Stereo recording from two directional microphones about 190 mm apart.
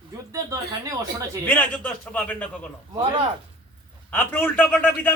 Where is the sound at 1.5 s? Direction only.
5° left (ahead or behind).